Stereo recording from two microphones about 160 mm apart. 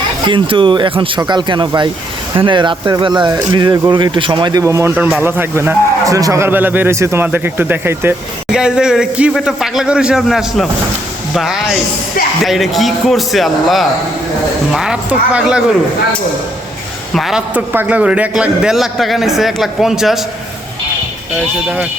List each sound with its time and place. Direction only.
0.3 s a man's voice: 30° right (ahead or behind); by 15.6 s 5° right (ahead or behind)
17.2 s a man's voice: 5° right (ahead or behind)